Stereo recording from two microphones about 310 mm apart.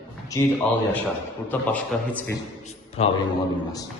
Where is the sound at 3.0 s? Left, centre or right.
Centre.